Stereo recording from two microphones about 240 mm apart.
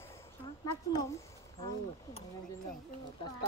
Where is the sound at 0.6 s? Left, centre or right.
Centre.